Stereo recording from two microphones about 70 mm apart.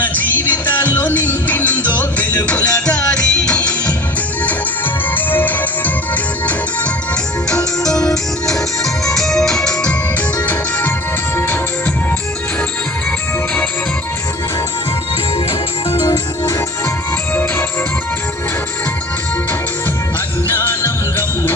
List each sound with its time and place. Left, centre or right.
0.0 s music: left
5.1 s music: left
8.0 s music: centre
10.3 s music: left
20.5 s music: left